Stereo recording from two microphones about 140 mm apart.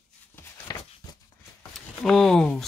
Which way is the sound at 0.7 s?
25° left (ahead or behind).